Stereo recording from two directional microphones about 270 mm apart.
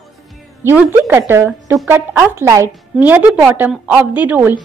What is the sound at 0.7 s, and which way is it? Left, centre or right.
Speech, centre.